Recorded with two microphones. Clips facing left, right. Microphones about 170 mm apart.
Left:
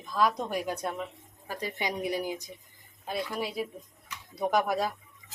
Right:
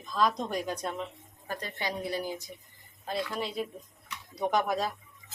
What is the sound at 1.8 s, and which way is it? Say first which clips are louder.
Speech: left 2 dB; 15° left (ahead or behind).